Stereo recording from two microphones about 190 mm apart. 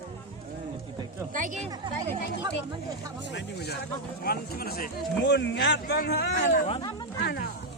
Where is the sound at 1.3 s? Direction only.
45° right (ahead or behind).